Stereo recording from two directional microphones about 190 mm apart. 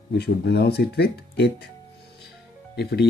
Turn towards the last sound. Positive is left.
turn(degrees=60)  # may be behind; listen again after turning